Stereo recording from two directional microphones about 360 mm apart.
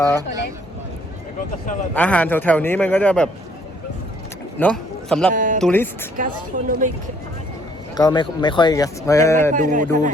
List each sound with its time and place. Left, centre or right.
2.0 s a man's voice: centre
4.5 s a man's voice: centre
5.3 s speech: right
5.5 s a man's voice: centre
6.1 s speech: right
7.9 s speech: centre
9.5 s speech: right